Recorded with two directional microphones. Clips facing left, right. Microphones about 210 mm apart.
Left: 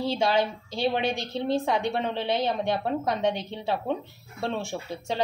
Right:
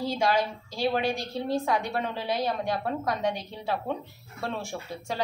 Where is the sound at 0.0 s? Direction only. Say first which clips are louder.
Left 2 dB; 25° left (ahead or behind).